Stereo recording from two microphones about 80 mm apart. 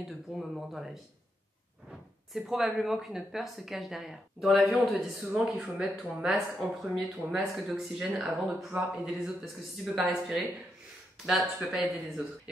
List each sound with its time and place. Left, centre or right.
0.4 s speech: centre
4.6 s a man's voice: centre